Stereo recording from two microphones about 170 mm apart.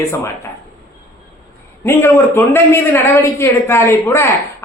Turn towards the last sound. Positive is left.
turn(degrees=15)  # may be behind; listen again after turning